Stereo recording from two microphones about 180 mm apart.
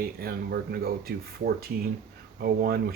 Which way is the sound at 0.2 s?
60° right (ahead or behind).